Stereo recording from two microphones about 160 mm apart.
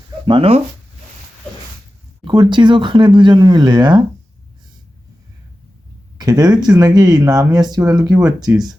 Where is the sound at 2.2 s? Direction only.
30° right (ahead or behind).